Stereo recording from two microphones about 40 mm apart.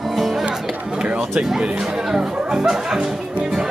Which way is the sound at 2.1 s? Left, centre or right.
Centre.